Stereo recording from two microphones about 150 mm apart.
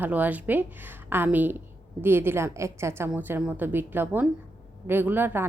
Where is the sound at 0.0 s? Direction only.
10° right (ahead or behind).